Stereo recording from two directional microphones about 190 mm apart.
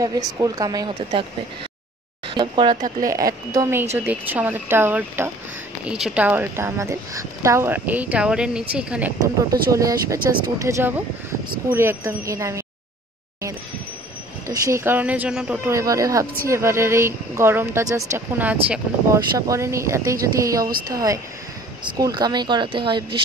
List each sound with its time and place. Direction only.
0.0 s speech: 20° right (ahead or behind)
2.3 s a woman's voice: 25° right (ahead or behind); by 9.1 s 5° right (ahead or behind)
9.4 s a woman's voice: 15° right (ahead or behind)
14.5 s a woman's voice: 15° right (ahead or behind)